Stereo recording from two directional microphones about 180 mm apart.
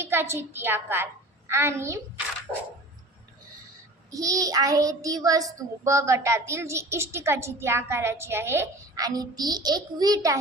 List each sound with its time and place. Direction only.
0.0 s a child's voice: 15° right (ahead or behind)
4.1 s a child's voice: 20° right (ahead or behind)